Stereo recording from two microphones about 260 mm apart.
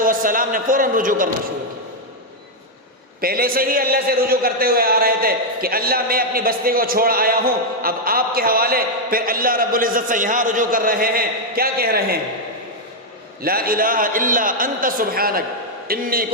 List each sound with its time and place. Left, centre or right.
0.0 s a man's voice: right
3.2 s a man's voice: right
13.4 s a man's voice: right